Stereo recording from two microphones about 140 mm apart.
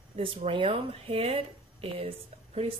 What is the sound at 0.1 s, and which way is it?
Speech, 45° right (ahead or behind).